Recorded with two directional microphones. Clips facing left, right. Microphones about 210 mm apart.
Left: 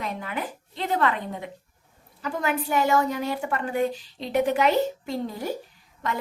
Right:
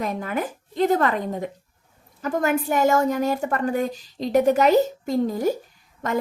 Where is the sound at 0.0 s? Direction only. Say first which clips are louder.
Right 5 dB; 45° right (ahead or behind).